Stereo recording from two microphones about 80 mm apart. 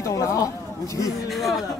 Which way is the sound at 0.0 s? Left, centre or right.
Left.